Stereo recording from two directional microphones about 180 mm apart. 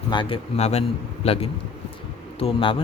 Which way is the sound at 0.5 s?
35° left (ahead or behind).